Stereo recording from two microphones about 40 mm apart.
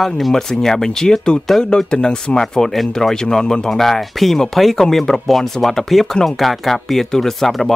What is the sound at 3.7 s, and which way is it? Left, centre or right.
Speech, centre.